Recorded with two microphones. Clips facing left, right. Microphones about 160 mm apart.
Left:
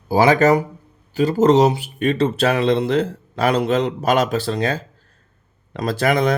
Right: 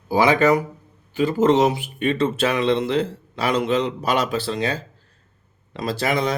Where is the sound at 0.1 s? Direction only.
40° left (ahead or behind).